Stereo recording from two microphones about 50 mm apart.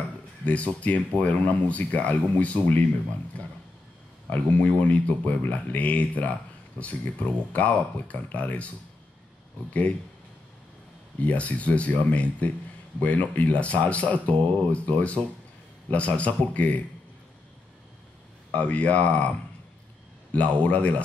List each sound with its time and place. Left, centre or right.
0.7 s speech: left
4.3 s speech: left
11.1 s speech: left
18.5 s speech: left
20.3 s speech: left